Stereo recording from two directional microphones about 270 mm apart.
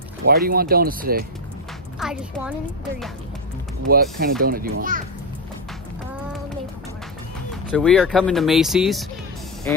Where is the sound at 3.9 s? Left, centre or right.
Right.